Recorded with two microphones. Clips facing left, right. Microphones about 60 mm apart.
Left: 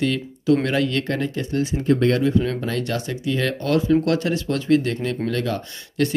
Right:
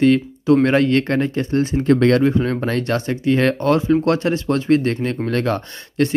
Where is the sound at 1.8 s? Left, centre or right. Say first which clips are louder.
Right 4 dB; right.